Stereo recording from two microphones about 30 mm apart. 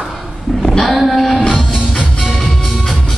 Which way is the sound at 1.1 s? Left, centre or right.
Centre.